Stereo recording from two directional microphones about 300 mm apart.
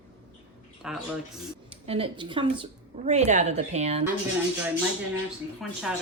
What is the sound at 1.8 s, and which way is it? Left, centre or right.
A woman's voice, centre.